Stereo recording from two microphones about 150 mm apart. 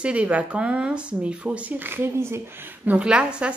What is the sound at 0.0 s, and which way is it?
A woman's voice, 10° right (ahead or behind).